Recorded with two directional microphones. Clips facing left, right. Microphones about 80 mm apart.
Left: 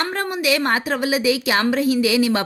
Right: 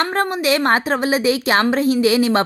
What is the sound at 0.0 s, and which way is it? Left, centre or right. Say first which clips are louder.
A woman's voice: right 4 dB; right.